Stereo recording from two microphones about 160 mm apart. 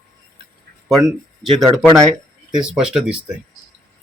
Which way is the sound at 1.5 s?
Centre (ahead or behind).